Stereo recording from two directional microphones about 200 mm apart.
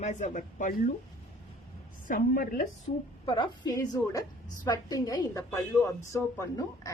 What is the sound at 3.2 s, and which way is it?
A woman's voice, 25° left (ahead or behind).